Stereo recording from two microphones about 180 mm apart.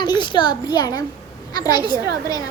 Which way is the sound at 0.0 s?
25° left (ahead or behind).